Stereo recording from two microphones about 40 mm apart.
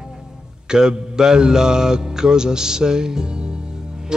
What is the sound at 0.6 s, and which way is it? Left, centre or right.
Mantra, centre.